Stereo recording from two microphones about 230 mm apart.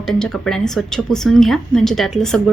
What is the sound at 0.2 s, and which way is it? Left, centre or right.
A woman's voice, centre.